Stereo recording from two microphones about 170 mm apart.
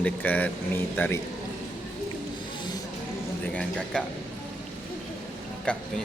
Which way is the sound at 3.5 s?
5° left (ahead or behind).